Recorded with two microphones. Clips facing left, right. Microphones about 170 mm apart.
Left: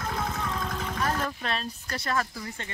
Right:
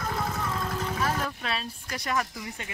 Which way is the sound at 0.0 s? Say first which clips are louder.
Right 1 dB; centre (ahead or behind).